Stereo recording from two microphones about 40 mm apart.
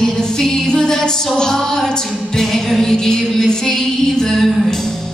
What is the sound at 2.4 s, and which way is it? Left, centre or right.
Music, centre.